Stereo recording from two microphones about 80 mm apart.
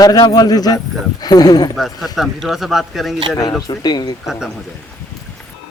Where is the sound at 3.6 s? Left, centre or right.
Left.